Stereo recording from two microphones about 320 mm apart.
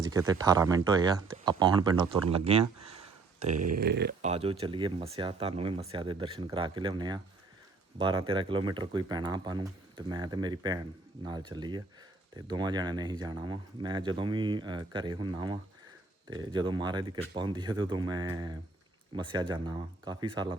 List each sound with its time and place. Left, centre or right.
0.1 s speech: centre
3.8 s speech: right; by 20.6 s centre